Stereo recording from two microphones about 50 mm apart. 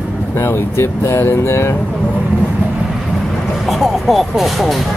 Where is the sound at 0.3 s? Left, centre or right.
Left.